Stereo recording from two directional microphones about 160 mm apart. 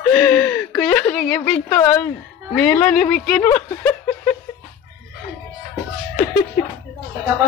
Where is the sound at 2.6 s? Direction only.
10° left (ahead or behind).